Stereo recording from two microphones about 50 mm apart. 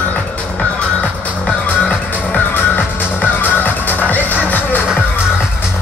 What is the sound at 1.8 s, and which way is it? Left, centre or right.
Music, left.